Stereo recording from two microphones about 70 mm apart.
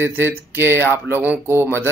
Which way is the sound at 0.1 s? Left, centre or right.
Right.